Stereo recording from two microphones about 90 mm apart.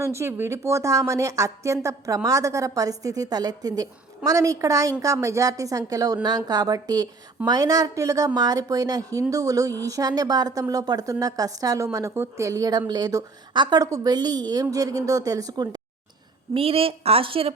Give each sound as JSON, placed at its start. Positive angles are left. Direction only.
{"t": 0.0, "sound": "a woman's voice", "side_deg": -30}
{"t": 12.1, "sound": "speech", "side_deg": -25}
{"t": 12.5, "sound": "a woman's voice", "side_deg": -45}
{"t": 13.5, "sound": "a woman's voice", "side_deg": -55}
{"t": 16.6, "sound": "a woman's voice", "side_deg": -90}